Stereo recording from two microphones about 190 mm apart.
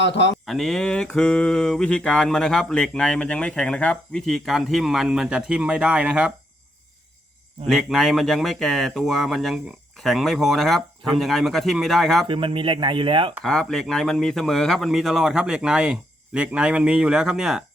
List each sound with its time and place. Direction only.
0.0 s mantra: 70° left (ahead or behind)
0.4 s mantra: centre (ahead or behind)
7.7 s mantra: centre (ahead or behind)
12.2 s speech: 25° right (ahead or behind)
13.4 s mantra: 5° left (ahead or behind)